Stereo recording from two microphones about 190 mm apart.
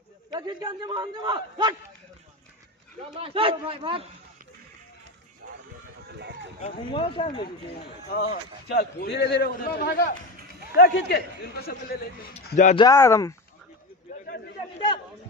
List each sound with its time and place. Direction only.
0.3 s a man's voice: 20° right (ahead or behind)
3.2 s a man's voice: 30° right (ahead or behind)
6.0 s music: 65° right (ahead or behind)
6.6 s speech: 25° left (ahead or behind)
8.7 s a man's voice: 60° left (ahead or behind)
12.4 s speech: 40° left (ahead or behind)
12.7 s speech: 15° left (ahead or behind)
14.1 s a sound: 40° left (ahead or behind)